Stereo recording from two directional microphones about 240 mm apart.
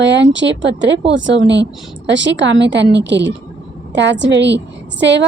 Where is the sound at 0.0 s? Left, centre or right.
Right.